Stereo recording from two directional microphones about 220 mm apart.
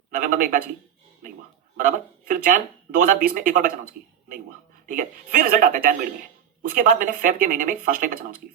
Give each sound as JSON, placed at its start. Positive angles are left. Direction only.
{"t": 0.1, "sound": "speech", "side_deg": -35}
{"t": 1.7, "sound": "speech", "side_deg": -40}
{"t": 4.9, "sound": "speech", "side_deg": -40}